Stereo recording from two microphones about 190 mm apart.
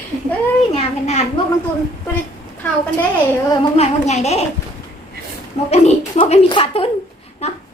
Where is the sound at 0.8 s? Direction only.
35° left (ahead or behind).